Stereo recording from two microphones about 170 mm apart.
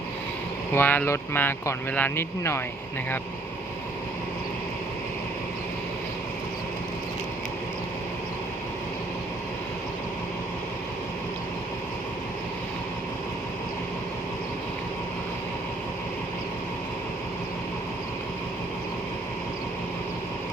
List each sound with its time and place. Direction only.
0.7 s speech: 10° left (ahead or behind)